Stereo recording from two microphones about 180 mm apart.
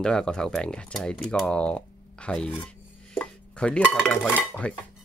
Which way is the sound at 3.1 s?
5° left (ahead or behind).